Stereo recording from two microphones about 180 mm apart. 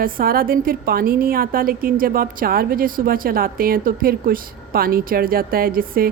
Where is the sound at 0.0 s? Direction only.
50° right (ahead or behind).